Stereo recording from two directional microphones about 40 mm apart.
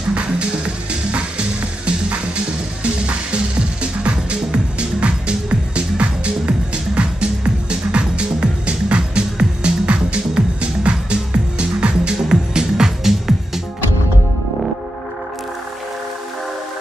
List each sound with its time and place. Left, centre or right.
1.9 s music: right